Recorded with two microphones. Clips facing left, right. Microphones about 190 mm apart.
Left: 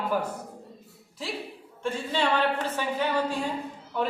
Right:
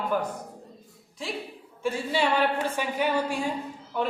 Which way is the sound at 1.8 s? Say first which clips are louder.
Right 1 dB; 10° right (ahead or behind).